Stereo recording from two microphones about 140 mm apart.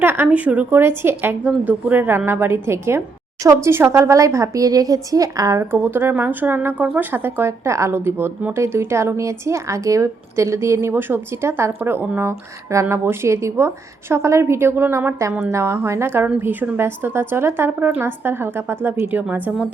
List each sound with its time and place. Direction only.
0.0 s speech: 15° right (ahead or behind)